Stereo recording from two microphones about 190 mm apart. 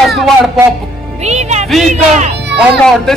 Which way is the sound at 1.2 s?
35° right (ahead or behind).